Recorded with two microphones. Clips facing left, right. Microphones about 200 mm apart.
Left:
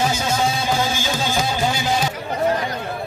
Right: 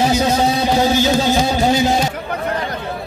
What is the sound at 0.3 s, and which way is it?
Music, 40° right (ahead or behind).